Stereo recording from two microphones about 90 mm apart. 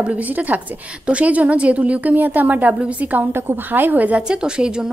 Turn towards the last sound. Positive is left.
turn(degrees=-10)  # may be behind; listen again after turning